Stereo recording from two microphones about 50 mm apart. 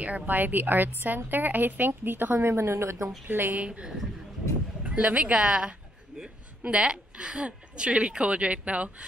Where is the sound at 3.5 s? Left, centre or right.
Right.